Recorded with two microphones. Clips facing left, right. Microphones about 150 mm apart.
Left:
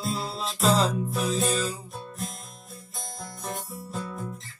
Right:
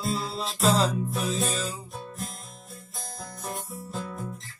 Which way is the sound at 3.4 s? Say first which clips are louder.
Left 1 dB; centre (ahead or behind).